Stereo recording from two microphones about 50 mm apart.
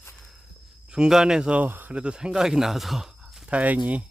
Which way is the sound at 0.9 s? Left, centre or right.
Centre.